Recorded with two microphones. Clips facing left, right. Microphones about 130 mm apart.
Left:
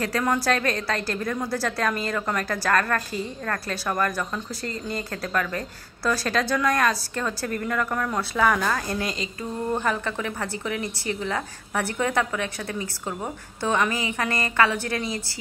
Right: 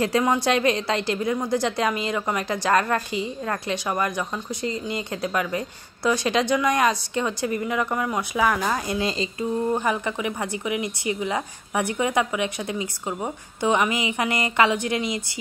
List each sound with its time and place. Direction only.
0.4 s a woman's voice: 20° right (ahead or behind)